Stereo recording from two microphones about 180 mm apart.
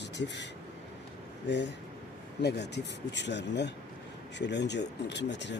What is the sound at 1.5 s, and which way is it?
Speech, 75° left (ahead or behind).